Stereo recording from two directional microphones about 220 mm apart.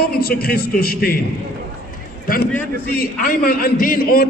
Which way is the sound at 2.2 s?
40° left (ahead or behind).